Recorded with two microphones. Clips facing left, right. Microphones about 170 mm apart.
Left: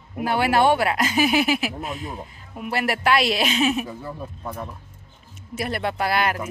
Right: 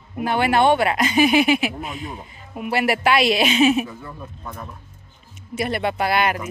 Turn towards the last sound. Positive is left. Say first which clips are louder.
# right 2 dB
turn(degrees=0)  # may be behind; listen again after turning